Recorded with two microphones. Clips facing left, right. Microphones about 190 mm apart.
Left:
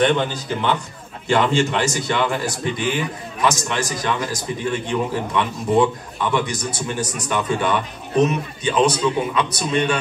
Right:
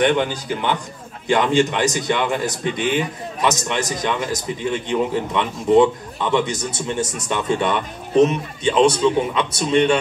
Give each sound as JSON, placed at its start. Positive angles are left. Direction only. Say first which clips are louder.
{"t": 0.0, "sound": "a man's voice", "louder": "even", "side_deg": -15}